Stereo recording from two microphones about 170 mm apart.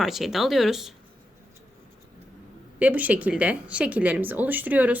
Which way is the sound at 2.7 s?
10° right (ahead or behind).